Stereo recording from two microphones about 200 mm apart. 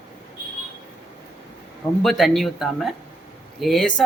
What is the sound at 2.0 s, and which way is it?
Speech, centre (ahead or behind).